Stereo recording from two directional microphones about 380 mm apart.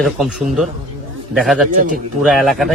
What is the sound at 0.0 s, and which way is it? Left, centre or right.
Speech, centre.